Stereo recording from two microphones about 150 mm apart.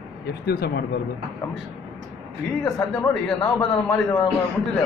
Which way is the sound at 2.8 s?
5° left (ahead or behind).